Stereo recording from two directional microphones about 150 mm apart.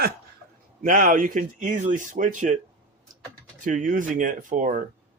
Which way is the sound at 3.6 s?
60° right (ahead or behind).